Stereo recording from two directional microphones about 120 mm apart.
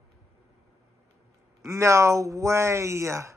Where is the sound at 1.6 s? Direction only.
25° right (ahead or behind).